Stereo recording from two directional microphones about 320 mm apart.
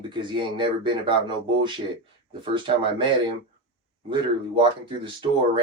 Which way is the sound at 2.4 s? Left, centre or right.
Centre.